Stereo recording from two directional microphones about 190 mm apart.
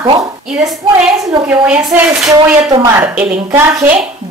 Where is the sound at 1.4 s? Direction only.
10° right (ahead or behind).